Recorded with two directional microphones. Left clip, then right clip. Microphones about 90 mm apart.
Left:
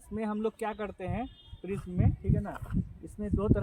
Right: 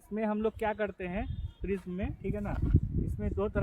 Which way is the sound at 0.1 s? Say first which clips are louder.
Right 2 dB; 30° right (ahead or behind).